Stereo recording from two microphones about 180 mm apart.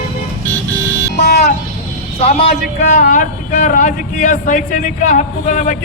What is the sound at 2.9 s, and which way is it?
Speech, 45° left (ahead or behind).